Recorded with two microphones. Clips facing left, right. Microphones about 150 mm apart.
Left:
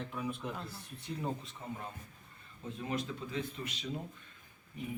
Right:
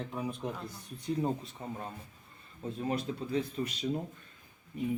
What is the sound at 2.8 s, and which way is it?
Speech, 35° right (ahead or behind).